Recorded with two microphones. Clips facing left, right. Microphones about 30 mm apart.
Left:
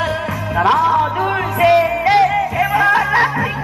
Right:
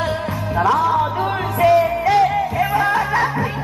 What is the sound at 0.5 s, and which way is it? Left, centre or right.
Music, left.